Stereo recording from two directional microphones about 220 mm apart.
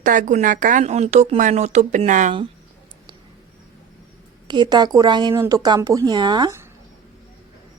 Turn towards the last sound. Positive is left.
turn(degrees=-15)  # may be behind; listen again after turning